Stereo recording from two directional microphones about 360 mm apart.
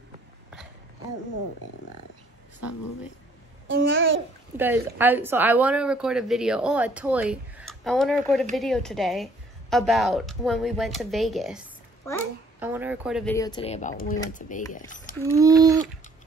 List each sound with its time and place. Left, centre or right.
3.6 s babbling: right
4.6 s speech: centre; by 15.1 s left
15.3 s speech: centre